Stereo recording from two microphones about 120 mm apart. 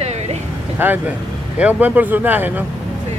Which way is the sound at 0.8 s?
15° right (ahead or behind).